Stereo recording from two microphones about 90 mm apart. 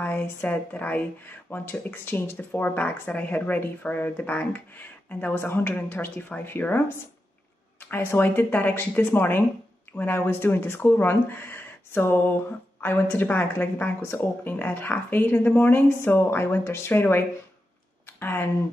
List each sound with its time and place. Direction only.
0.0 s speech: 20° left (ahead or behind)
7.8 s speech: 25° left (ahead or behind)
18.0 s a sound: 25° left (ahead or behind)